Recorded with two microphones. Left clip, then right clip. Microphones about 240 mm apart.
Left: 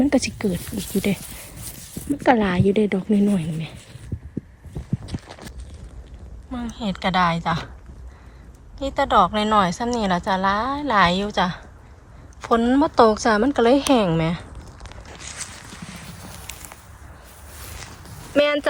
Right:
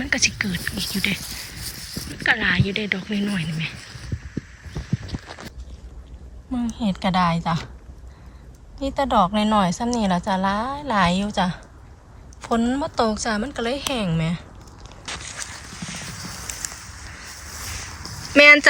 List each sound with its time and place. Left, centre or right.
0.1 s a woman's voice: centre
5.1 s clip-clop: left
6.5 s a woman's voice: centre
8.8 s a woman's voice: centre
15.8 s clip-clop: left
18.3 s a woman's voice: centre